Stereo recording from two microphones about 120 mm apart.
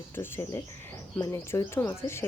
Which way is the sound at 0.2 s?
20° left (ahead or behind).